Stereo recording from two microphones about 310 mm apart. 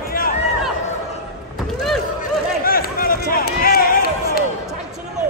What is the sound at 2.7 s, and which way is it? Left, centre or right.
Basketball bounce, left.